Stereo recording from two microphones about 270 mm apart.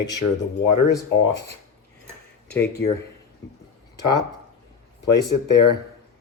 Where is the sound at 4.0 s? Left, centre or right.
Left.